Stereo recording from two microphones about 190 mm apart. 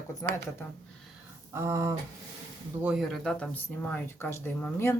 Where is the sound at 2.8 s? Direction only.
5° right (ahead or behind).